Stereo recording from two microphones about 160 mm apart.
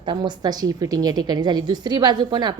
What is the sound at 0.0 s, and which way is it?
A woman's voice, 30° right (ahead or behind).